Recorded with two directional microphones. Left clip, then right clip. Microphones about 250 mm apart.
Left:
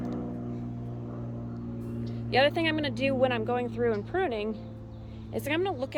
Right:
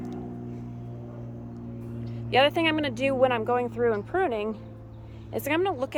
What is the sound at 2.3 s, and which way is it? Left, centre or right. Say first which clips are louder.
Speech: right 3 dB; centre.